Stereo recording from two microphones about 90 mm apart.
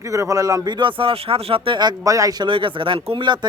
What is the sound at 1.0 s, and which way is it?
Speech, 85° right.